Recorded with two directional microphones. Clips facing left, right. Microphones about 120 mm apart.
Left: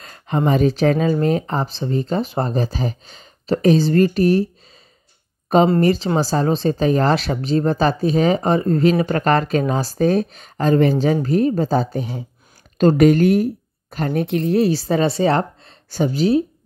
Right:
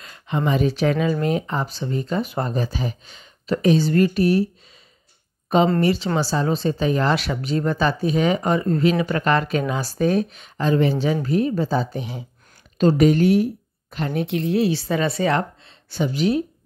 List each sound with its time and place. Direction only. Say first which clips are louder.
0.0 s speech: left 4 dB; 40° left (ahead or behind)
5.8 s speech: left 3 dB; 40° left (ahead or behind)
12.7 s speech: left 3 dB; 50° left (ahead or behind); by 16.4 s 35° left (ahead or behind)